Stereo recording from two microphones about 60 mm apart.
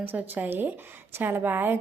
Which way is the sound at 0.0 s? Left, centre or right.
Right.